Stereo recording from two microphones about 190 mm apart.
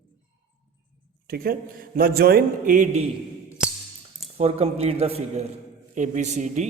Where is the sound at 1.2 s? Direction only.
50° right (ahead or behind).